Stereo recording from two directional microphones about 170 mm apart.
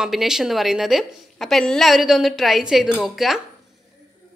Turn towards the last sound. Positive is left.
turn(degrees=0)  # may be behind; listen again after turning